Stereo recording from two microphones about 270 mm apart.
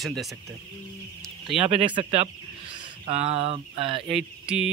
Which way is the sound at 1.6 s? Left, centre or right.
Centre.